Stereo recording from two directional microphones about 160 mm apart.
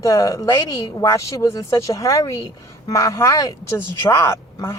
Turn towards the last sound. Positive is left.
turn(degrees=15)  # may be behind; listen again after turning